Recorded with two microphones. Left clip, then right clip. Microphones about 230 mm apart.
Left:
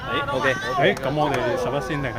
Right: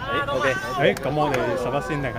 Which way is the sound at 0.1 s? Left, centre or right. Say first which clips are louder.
Even; left.